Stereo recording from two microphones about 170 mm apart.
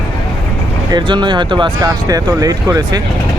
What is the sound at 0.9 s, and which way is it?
Speech, 25° right (ahead or behind).